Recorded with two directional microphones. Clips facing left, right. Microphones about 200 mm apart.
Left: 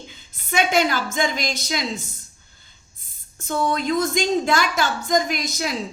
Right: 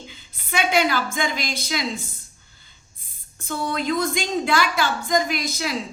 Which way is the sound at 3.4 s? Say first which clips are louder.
Left 3 dB; 45° left (ahead or behind).